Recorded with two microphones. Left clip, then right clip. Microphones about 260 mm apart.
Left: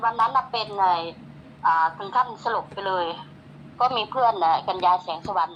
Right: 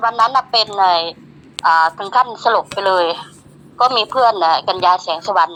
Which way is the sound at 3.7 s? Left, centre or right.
Right.